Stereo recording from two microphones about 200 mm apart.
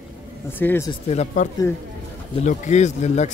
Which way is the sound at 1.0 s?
35° left (ahead or behind).